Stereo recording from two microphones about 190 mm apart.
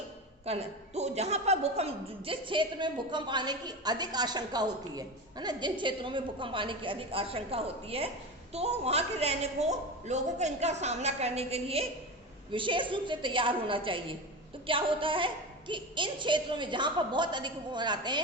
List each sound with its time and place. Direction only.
0.4 s a woman's voice: 35° right (ahead or behind)